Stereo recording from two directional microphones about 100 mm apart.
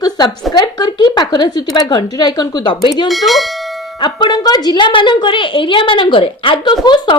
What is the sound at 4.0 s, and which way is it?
A woman's voice, 50° left (ahead or behind).